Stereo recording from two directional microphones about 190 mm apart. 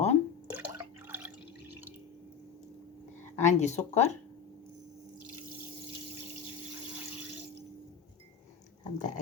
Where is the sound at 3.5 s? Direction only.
35° left (ahead or behind).